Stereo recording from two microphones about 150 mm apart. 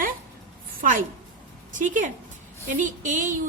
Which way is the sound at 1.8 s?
60° right (ahead or behind).